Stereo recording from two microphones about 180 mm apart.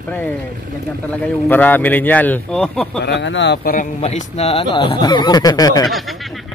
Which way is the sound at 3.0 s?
75° left (ahead or behind).